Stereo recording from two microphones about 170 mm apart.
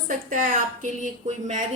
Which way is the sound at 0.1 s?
50° right (ahead or behind).